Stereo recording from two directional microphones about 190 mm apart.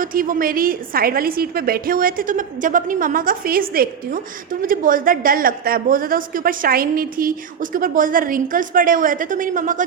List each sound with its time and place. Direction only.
0.0 s a woman's voice: 45° right (ahead or behind)